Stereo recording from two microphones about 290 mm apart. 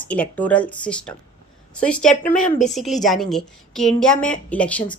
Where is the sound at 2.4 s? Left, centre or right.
Left.